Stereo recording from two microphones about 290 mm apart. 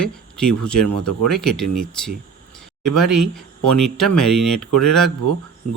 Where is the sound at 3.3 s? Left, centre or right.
Centre.